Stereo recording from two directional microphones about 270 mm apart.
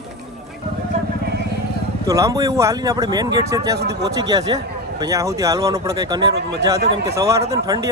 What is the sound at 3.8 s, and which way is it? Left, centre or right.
Speech, right.